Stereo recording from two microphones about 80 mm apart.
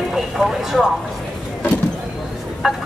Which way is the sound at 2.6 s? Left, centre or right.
Centre.